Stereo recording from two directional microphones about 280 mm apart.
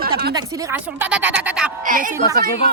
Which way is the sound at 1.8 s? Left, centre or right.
Right.